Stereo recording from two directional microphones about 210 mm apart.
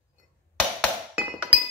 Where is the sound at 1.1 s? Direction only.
10° right (ahead or behind).